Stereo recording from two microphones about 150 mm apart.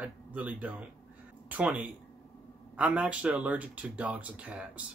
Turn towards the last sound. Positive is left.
turn(degrees=-10)  # may be behind; listen again after turning